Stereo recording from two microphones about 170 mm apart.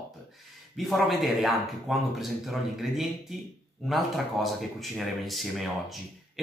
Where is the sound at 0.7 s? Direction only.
Centre (ahead or behind).